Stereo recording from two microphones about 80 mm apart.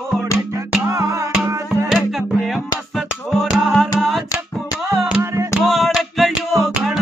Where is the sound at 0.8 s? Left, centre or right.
Right.